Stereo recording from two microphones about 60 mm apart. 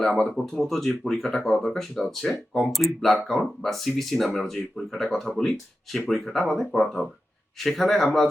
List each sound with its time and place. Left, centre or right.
0.0 s speech: centre